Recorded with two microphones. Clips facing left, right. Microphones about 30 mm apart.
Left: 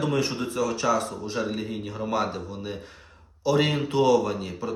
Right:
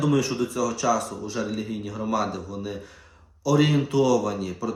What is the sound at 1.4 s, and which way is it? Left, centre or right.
Speech, left.